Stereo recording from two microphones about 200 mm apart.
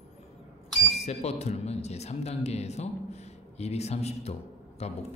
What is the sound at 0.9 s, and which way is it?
Speech, 30° left (ahead or behind).